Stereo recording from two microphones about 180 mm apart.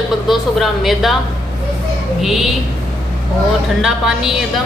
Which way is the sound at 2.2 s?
Centre (ahead or behind).